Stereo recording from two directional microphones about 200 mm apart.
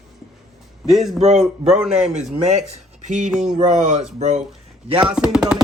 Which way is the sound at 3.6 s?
40° right (ahead or behind).